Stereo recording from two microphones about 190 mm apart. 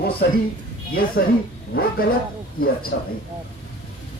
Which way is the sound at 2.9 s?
60° left (ahead or behind).